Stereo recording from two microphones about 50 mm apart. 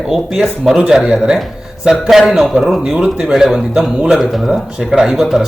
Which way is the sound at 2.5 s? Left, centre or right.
Right.